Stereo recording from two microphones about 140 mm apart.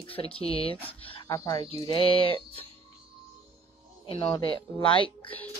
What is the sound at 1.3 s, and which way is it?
Speech, 25° left (ahead or behind).